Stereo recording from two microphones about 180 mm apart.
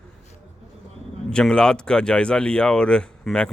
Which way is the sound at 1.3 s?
5° left (ahead or behind).